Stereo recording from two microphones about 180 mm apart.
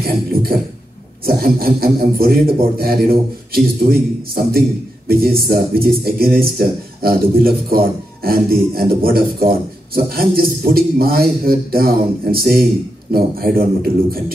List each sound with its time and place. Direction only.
0.0 s a man's voice: 55° right (ahead or behind)